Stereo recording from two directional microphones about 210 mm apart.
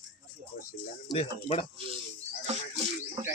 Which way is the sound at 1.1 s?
25° left (ahead or behind).